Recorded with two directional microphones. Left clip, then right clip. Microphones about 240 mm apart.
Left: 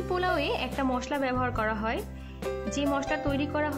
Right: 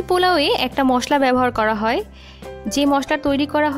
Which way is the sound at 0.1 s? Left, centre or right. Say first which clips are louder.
Right 12 dB; right.